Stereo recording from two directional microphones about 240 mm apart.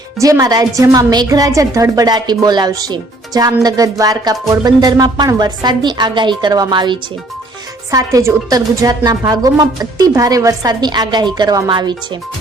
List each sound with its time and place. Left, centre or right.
0.2 s a woman's voice: centre